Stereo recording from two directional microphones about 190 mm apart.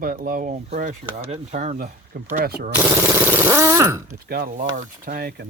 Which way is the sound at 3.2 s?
10° right (ahead or behind).